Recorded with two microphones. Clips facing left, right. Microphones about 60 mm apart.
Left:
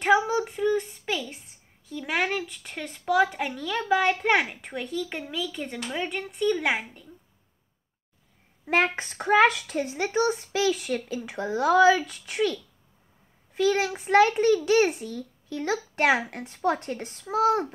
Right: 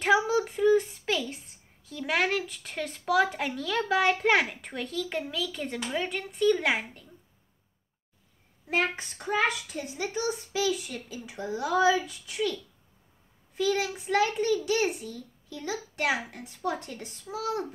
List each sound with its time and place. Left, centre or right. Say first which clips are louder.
0.4 s a sound: right 2 dB; centre
1.9 s speech: even; centre
8.6 s speech: left 4 dB; left
13.6 s a woman's voice: left 4 dB; left
17.2 s a woman's voice: left 9 dB; left